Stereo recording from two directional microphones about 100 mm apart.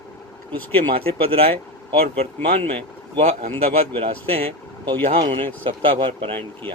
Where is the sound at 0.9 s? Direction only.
70° right (ahead or behind).